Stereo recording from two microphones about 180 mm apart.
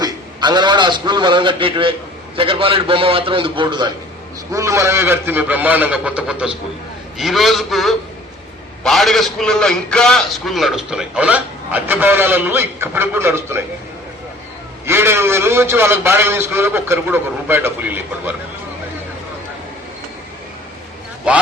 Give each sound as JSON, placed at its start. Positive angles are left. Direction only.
{"t": 0.0, "sound": "a man's voice", "side_deg": -25}
{"t": 14.8, "sound": "a man's voice", "side_deg": -15}
{"t": 21.3, "sound": "a man's voice", "side_deg": -5}